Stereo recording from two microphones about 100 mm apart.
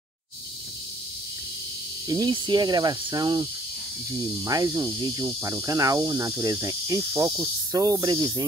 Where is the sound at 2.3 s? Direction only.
50° right (ahead or behind).